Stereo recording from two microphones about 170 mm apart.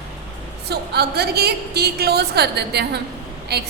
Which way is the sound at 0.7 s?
70° right (ahead or behind).